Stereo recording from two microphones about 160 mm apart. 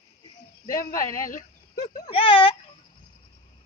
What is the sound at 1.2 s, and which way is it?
Speech, 60° left (ahead or behind).